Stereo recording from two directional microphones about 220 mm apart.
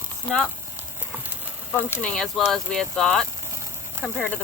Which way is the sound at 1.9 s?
5° left (ahead or behind).